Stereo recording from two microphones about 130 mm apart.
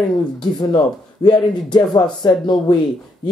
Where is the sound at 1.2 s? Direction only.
35° left (ahead or behind).